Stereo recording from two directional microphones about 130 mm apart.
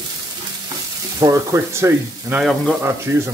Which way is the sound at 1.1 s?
25° right (ahead or behind).